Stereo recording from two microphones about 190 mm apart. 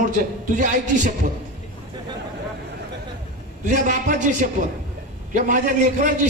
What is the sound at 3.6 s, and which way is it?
Speech, 45° right (ahead or behind).